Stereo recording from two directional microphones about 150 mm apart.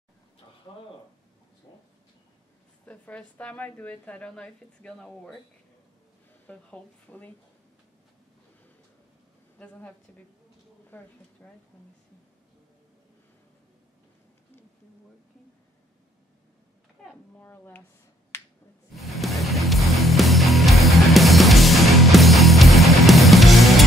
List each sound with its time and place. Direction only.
1.7 s a sound: 25° left (ahead or behind)
2.8 s a woman's voice: 10° left (ahead or behind)
6.4 s a woman's voice: 10° left (ahead or behind)
9.6 s a woman's voice: 10° left (ahead or behind)
17.0 s a sound: 5° left (ahead or behind)
17.5 s a woman's voice: 15° left (ahead or behind)
18.9 s music: centre (ahead or behind)